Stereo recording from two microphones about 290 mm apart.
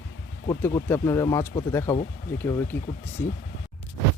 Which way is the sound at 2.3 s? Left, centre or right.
Centre.